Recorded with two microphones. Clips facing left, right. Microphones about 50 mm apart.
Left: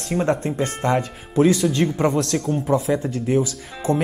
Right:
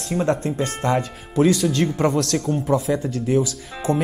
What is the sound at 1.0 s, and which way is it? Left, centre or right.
Speech, centre.